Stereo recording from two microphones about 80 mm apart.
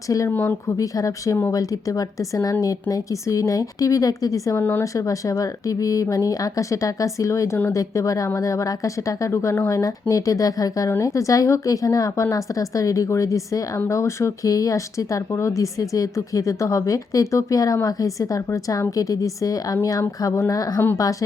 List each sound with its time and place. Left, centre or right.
0.1 s a woman's voice: left
4.5 s speech: left
4.8 s a woman's voice: left
10.8 s a woman's voice: left